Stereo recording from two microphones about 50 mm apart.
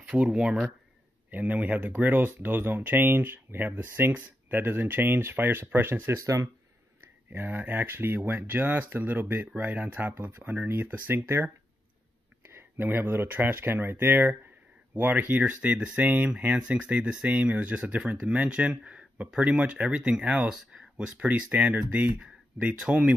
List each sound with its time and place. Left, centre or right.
0.0 s speech: right
1.3 s speech: right
4.1 s speech: right
6.1 s speech: right
7.2 s speech: right
10.1 s speech: right
12.5 s speech: right
16.0 s speech: right
16.6 s speech: right
21.5 s speech: right
22.8 s speech: right